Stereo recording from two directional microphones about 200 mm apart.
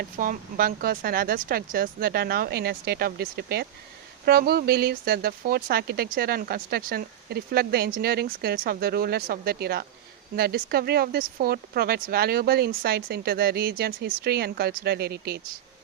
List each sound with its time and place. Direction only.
0.0 s speech: 45° right (ahead or behind)